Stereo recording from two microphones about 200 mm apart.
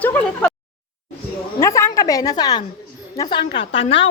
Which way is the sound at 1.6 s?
15° left (ahead or behind).